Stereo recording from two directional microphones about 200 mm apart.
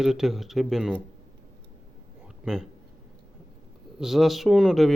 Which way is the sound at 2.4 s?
Centre (ahead or behind).